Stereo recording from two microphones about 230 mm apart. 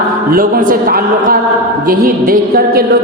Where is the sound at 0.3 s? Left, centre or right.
Right.